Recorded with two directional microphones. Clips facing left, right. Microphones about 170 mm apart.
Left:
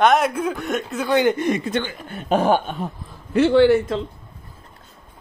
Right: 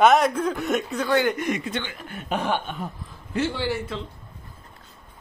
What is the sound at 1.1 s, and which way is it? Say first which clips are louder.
Speech: left 5 dB; 20° left (ahead or behind).